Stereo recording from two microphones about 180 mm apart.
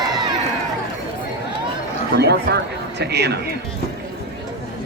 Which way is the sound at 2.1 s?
65° right (ahead or behind).